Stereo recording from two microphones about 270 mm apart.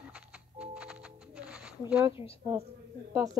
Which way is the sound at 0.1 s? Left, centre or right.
Centre.